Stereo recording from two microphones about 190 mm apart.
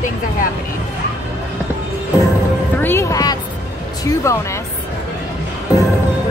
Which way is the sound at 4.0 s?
15° left (ahead or behind).